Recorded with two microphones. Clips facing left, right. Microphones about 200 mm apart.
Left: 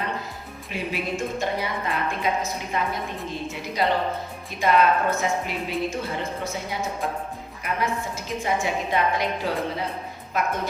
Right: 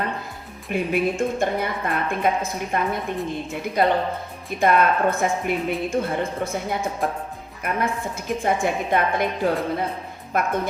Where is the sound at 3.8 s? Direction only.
55° right (ahead or behind).